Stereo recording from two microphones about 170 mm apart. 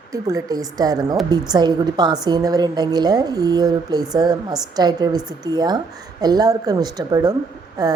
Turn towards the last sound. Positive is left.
turn(degrees=-20)  # may be behind; listen again after turning